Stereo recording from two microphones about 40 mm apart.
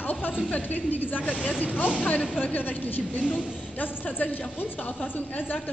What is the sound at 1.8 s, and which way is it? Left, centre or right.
Speech, left.